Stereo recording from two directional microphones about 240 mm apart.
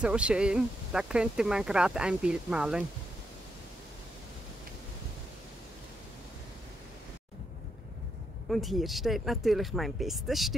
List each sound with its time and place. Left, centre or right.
0.0 s speech: centre
8.5 s speech: centre